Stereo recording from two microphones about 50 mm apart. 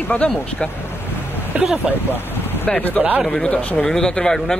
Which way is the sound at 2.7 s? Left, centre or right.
Left.